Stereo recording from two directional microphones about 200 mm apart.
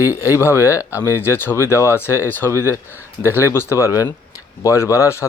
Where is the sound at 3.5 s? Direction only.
15° left (ahead or behind).